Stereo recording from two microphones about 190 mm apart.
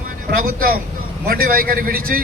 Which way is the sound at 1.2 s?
50° right (ahead or behind).